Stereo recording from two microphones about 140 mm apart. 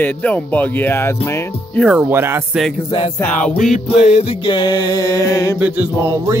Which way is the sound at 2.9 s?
40° left (ahead or behind).